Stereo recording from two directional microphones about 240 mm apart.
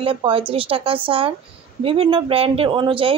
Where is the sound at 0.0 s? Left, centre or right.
Right.